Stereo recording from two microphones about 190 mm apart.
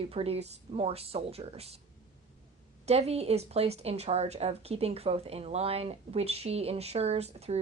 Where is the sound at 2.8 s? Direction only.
35° right (ahead or behind).